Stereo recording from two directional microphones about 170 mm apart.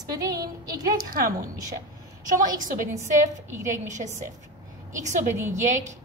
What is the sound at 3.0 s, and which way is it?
A woman's voice, 45° right (ahead or behind).